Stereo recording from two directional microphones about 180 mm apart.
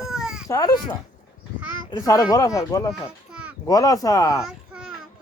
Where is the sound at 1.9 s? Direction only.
20° left (ahead or behind).